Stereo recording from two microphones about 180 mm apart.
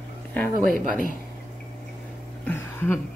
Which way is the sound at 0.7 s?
50° right (ahead or behind).